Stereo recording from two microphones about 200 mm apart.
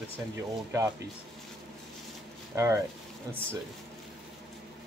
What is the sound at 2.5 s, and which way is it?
Speech, 15° right (ahead or behind).